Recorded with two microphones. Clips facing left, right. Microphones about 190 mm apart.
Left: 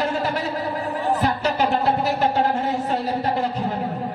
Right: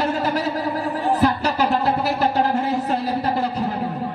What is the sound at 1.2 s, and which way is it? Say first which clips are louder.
Music: right 3 dB; 40° right (ahead or behind).